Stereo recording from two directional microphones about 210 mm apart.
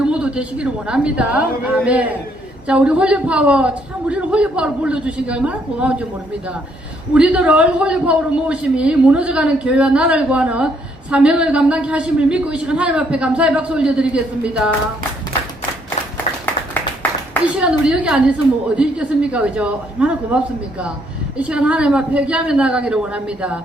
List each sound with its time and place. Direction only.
0.0 s a man's voice: 5° right (ahead or behind)
7.1 s a man's voice: 5° right (ahead or behind)
17.6 s a man's voice: 5° right (ahead or behind)